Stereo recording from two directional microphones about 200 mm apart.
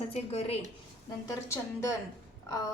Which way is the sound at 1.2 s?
15° left (ahead or behind).